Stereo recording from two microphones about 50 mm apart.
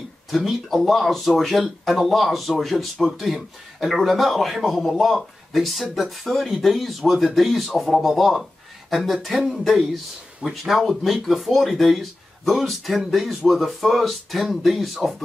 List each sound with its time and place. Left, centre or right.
0.3 s speech: centre
10.4 s speech: centre